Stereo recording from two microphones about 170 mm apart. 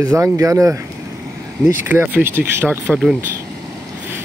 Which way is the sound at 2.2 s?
15° right (ahead or behind).